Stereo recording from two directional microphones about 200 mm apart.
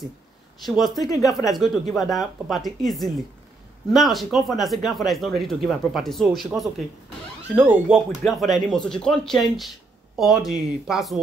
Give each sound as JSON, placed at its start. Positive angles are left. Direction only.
{"t": 0.7, "sound": "speech", "side_deg": 0}